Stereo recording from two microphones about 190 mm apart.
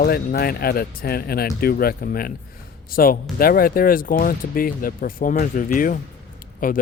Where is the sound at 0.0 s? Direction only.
55° left (ahead or behind).